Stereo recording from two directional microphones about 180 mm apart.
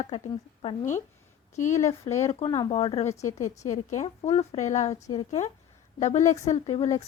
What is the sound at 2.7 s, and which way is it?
Speech, 35° left (ahead or behind).